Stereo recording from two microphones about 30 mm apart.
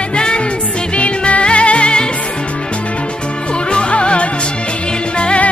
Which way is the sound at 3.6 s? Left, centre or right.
Left.